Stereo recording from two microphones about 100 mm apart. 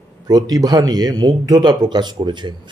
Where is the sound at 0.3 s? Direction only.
40° right (ahead or behind).